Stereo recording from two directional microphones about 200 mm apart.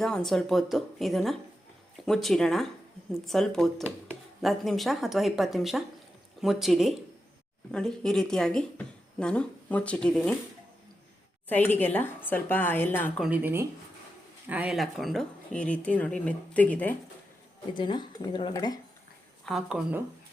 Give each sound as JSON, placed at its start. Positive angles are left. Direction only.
{"t": 0.0, "sound": "speech", "side_deg": 5}
{"t": 11.4, "sound": "a woman's voice", "side_deg": 10}
{"t": 13.2, "sound": "speech", "side_deg": -10}
{"t": 17.7, "sound": "speech", "side_deg": 20}
{"t": 19.5, "sound": "speech", "side_deg": 0}